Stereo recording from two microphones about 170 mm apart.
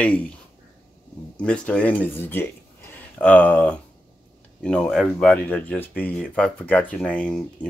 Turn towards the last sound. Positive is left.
turn(degrees=5)  # may be behind; listen again after turning